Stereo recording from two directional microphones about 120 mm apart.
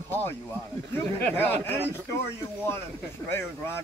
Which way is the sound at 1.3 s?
15° left (ahead or behind).